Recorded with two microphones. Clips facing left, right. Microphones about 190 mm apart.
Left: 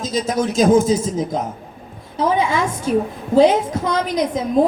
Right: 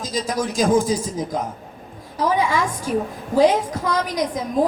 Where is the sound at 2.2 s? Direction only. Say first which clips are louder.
Left 2 dB; 25° left (ahead or behind).